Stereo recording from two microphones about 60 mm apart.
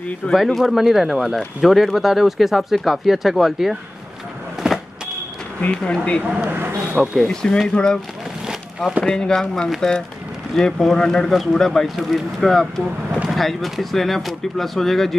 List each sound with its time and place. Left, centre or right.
0.3 s speech: centre
5.6 s speech: centre
6.4 s speech: right
7.2 s speech: centre
8.5 s boat: centre
9.0 s speech: centre